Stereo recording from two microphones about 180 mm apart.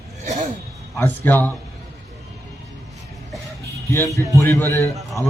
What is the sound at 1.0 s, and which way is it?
Speech, 10° left (ahead or behind).